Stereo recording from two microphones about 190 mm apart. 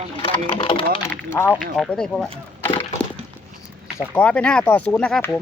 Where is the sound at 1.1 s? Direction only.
10° left (ahead or behind).